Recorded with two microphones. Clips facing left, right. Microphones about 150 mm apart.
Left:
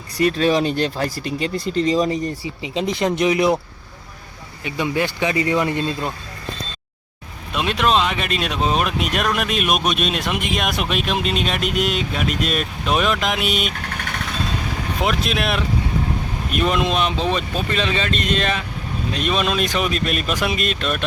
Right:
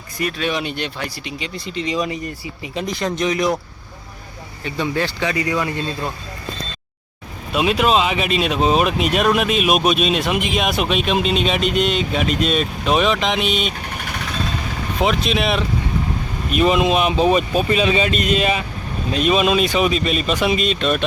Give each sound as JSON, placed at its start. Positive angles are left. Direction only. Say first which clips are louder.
{"t": 0.2, "sound": "speech", "louder": "left 6 dB", "side_deg": 35}
{"t": 3.0, "sound": "speech", "louder": "left 3 dB", "side_deg": 15}
{"t": 4.6, "sound": "speech", "louder": "even", "side_deg": 15}
{"t": 7.5, "sound": "speech", "louder": "right 2 dB", "side_deg": -5}
{"t": 15.0, "sound": "speech", "louder": "right 3 dB", "side_deg": 0}